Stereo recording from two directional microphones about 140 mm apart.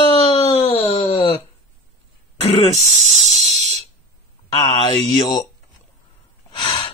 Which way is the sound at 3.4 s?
55° right (ahead or behind).